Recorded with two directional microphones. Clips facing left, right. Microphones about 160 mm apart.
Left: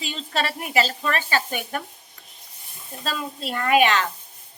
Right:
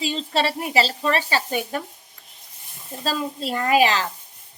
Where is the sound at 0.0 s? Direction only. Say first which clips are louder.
Right 4 dB; 25° right (ahead or behind).